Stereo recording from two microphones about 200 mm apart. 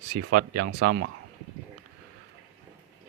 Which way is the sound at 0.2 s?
50° right (ahead or behind).